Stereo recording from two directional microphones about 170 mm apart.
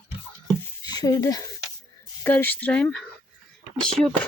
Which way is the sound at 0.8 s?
25° left (ahead or behind).